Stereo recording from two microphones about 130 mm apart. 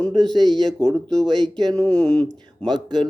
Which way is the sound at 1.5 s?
30° right (ahead or behind).